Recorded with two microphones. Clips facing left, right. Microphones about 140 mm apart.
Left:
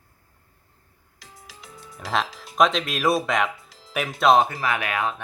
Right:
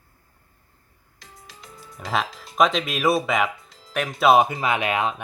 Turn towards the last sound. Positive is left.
turn(degrees=-20)  # may be behind; listen again after turning